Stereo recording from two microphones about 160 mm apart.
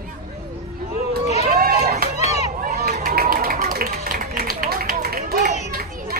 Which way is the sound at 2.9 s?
60° right (ahead or behind).